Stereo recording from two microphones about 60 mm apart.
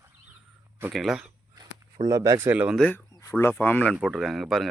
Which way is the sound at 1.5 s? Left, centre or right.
Right.